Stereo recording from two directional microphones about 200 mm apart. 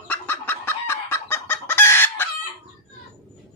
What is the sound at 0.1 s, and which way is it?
Chicken, 10° left (ahead or behind).